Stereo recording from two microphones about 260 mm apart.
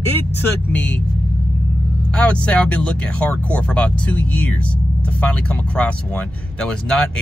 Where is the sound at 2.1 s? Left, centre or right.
Centre.